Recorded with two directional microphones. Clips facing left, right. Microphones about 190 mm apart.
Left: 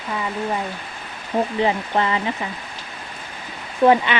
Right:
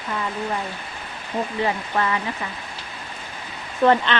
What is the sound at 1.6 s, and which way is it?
Speech, 20° left (ahead or behind).